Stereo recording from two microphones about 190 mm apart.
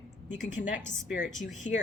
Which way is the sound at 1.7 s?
35° left (ahead or behind).